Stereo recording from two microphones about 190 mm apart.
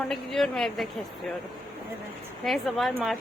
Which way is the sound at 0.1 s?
Centre (ahead or behind).